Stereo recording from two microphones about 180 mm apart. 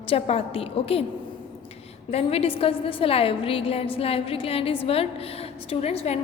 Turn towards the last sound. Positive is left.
turn(degrees=35)  # may be behind; listen again after turning